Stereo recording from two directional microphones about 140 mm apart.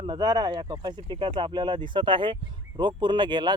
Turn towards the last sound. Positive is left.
turn(degrees=-35)  # may be behind; listen again after turning